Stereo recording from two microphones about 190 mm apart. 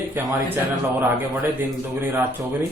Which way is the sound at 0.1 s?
10° right (ahead or behind).